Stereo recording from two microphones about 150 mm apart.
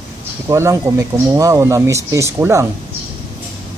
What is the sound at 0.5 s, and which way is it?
A man's voice, 20° right (ahead or behind).